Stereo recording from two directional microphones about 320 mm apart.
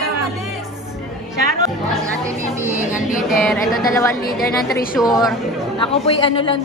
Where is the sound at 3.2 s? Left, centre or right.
Centre.